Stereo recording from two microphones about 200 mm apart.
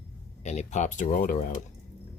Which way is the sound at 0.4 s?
35° left (ahead or behind).